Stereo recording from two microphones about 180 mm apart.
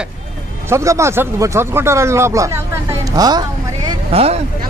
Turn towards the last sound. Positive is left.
turn(degrees=-35)  # may be behind; listen again after turning